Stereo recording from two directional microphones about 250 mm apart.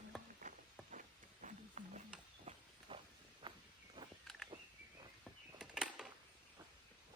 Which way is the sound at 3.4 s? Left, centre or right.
Centre.